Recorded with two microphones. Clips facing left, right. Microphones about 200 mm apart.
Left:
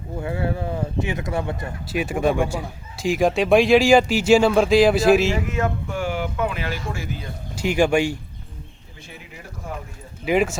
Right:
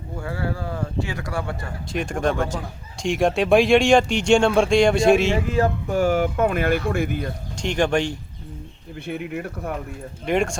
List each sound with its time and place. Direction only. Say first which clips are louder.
0.2 s speech: left 3 dB; 20° left (ahead or behind)
1.9 s a man's voice: left 2 dB; 5° left (ahead or behind)
5.3 s speech: right 3 dB; 30° right (ahead or behind); by 7.3 s 55° right (ahead or behind)
7.5 s speech: left 3 dB; 5° left (ahead or behind)
9.0 s speech: right 13 dB; 60° right (ahead or behind)
10.2 s a man's voice: left 2 dB; 5° left (ahead or behind)